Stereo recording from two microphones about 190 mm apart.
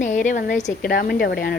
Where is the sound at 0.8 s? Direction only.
50° left (ahead or behind).